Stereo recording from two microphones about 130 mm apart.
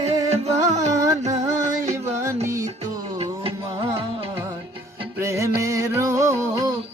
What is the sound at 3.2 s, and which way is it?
Music, 45° right (ahead or behind).